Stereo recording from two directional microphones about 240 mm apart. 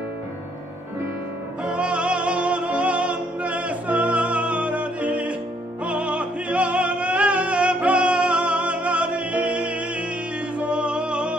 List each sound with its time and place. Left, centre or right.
1.6 s music: centre